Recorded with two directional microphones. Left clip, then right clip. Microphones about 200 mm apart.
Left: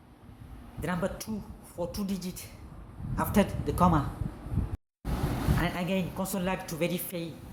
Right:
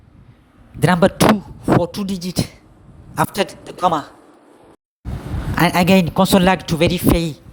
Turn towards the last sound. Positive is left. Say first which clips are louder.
# right 16 dB
turn(degrees=-55)  # may be behind; listen again after turning